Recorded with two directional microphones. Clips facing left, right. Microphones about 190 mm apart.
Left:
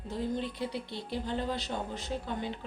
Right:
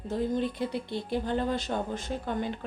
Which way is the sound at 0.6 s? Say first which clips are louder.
Right 4 dB; 55° right (ahead or behind).